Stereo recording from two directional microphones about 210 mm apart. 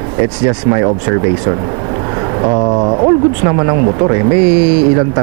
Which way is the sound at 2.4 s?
25° right (ahead or behind).